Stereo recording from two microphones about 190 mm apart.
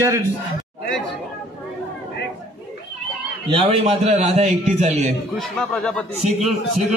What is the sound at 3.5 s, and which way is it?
A man's voice, 30° right (ahead or behind).